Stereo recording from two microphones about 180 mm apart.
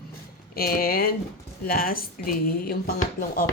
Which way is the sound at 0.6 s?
55° left (ahead or behind).